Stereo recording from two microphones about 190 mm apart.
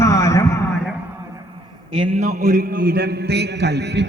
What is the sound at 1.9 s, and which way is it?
A man's voice, 30° right (ahead or behind).